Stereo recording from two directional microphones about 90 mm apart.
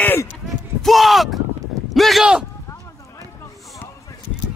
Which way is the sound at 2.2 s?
10° right (ahead or behind).